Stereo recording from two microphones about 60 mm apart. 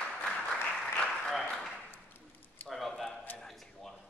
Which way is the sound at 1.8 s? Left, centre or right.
Left.